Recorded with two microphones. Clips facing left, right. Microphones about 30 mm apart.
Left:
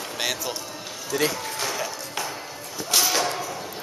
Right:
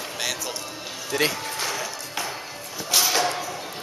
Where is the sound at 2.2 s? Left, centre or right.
Centre.